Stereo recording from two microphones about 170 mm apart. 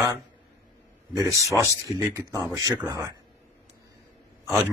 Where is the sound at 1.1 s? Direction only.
20° right (ahead or behind).